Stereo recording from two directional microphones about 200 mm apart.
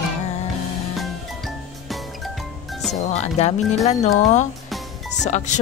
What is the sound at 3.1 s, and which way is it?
Speech, 35° left (ahead or behind).